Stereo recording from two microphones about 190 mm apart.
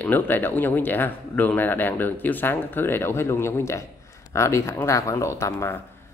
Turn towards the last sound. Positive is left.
turn(degrees=15)  # may be behind; listen again after turning